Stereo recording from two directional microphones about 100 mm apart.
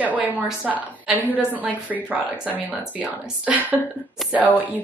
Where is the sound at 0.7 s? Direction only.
5° right (ahead or behind).